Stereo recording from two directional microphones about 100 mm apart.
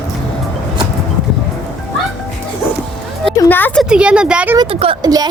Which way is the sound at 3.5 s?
20° left (ahead or behind).